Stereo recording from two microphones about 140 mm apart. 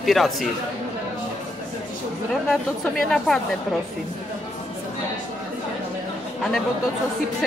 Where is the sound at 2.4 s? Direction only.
5° left (ahead or behind).